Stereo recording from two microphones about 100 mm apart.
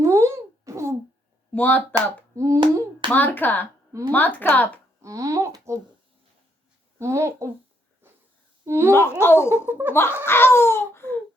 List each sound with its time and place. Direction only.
0.0 s a sound: 30° right (ahead or behind)
1.5 s a woman's voice: 15° left (ahead or behind)
2.0 s hands: 30° right (ahead or behind)
3.1 s a woman's voice: 20° left (ahead or behind)
5.0 s a sound: 35° right (ahead or behind)
7.0 s speech: 30° right (ahead or behind)
8.0 s wheeze: 25° right (ahead or behind)
8.6 s speech: 25° right (ahead or behind)
8.9 s speech: 25° left (ahead or behind)
9.4 s speech: 20° right (ahead or behind)
9.9 s speech: 25° left (ahead or behind)